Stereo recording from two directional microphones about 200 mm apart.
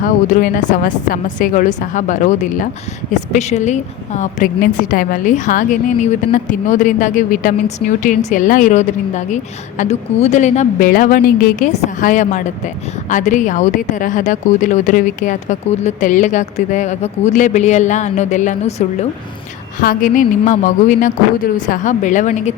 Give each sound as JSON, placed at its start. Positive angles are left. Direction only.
{"t": 0.0, "sound": "a woman's voice", "side_deg": 40}
{"t": 19.8, "sound": "a woman's voice", "side_deg": 45}